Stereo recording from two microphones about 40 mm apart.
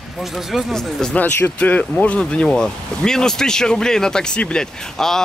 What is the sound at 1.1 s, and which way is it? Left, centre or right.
Speech, left.